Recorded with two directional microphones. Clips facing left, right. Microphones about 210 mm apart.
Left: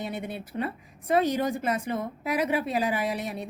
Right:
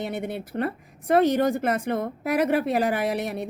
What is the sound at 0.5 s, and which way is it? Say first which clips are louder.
Speech: right 3 dB; 60° right (ahead or behind).